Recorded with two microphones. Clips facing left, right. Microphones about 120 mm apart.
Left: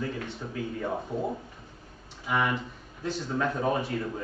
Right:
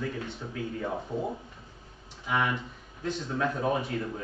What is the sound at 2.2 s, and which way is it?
A man's voice, centre (ahead or behind).